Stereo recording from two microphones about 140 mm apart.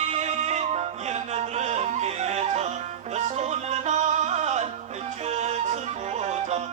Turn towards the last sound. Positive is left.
turn(degrees=-55)  # may be behind; listen again after turning